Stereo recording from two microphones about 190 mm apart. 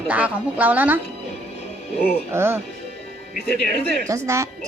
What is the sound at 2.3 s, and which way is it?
Speech, 15° right (ahead or behind).